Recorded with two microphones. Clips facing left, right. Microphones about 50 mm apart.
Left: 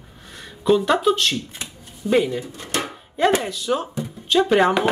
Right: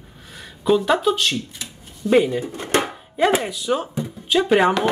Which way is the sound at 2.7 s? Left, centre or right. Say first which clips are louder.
Right 5 dB; right.